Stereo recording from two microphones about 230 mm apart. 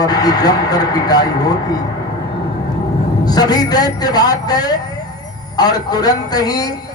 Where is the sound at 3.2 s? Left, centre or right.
Centre.